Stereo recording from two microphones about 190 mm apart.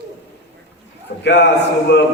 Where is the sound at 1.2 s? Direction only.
65° left (ahead or behind).